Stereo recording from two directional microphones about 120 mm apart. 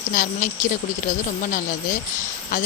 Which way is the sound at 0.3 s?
90° left.